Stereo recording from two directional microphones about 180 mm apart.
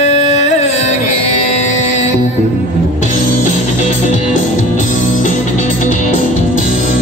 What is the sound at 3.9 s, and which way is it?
Music, 45° left (ahead or behind).